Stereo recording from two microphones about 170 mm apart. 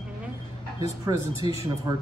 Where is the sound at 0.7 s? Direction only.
20° right (ahead or behind).